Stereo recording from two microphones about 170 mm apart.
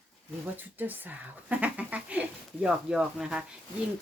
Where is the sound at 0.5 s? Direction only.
10° right (ahead or behind).